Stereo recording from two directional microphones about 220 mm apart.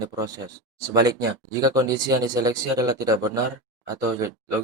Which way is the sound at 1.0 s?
15° right (ahead or behind).